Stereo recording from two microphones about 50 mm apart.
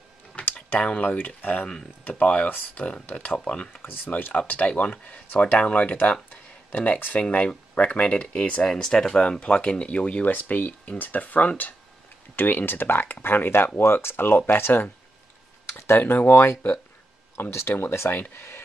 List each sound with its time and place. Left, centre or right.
0.4 s typing: left
0.7 s speech: left
1.1 s speech: left
3.3 s speech: centre
3.8 s speech: left
4.1 s speech: left
6.3 s a sound: left
7.2 s speech: left
10.2 s speech: left
16.0 s speech: left
17.5 s speech: left
18.3 s speech: left